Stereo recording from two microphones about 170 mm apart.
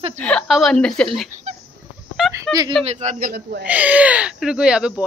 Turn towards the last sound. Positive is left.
turn(degrees=-5)  # may be behind; listen again after turning